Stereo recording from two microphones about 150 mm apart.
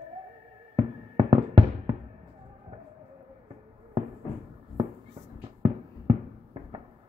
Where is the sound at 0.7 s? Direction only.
35° right (ahead or behind).